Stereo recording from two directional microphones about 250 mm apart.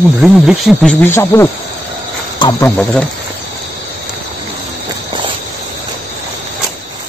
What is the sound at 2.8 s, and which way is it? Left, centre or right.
Speech, centre.